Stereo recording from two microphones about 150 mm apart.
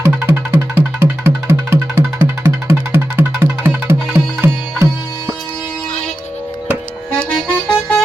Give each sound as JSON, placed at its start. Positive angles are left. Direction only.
{"t": 0.0, "sound": "music", "side_deg": -20}
{"t": 7.3, "sound": "music", "side_deg": 10}